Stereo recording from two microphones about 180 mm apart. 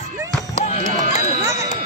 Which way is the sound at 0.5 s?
35° left (ahead or behind).